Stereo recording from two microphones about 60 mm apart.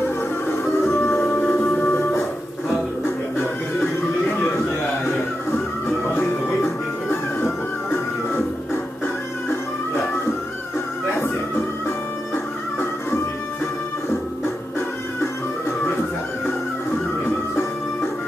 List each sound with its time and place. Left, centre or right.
0.5 s music: left
1.5 s music: left
5.0 s music: left
11.1 s music: left